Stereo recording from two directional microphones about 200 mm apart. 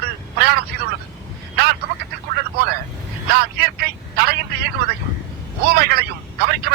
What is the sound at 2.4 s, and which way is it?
Vehicle, 55° right (ahead or behind).